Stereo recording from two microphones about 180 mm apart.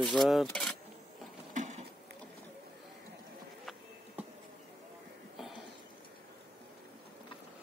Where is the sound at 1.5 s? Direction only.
40° right (ahead or behind).